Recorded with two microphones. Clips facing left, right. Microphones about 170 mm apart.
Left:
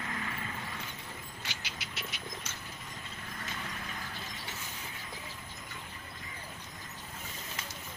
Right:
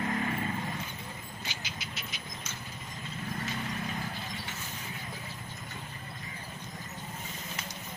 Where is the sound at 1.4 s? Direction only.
70° left (ahead or behind).